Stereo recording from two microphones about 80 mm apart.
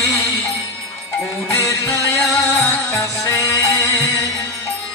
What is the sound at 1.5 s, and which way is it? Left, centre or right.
Music, left.